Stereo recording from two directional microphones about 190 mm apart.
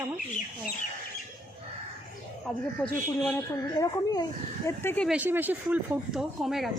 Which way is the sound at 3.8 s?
20° left (ahead or behind).